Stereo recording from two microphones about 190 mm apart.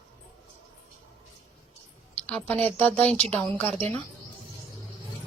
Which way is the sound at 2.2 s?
5° left (ahead or behind).